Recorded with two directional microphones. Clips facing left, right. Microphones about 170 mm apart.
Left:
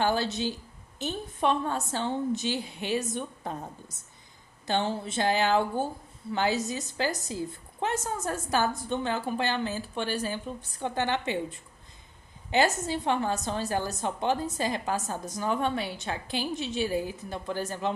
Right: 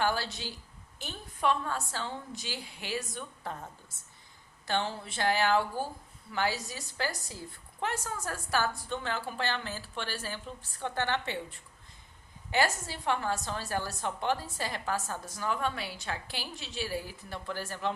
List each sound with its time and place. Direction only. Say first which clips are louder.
0.0 s a woman's voice: left 5 dB; 20° left (ahead or behind)